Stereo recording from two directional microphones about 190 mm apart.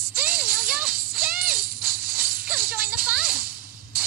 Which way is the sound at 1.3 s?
50° right (ahead or behind).